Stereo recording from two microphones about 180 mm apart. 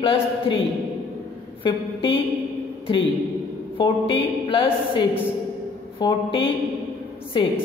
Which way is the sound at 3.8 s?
30° left (ahead or behind).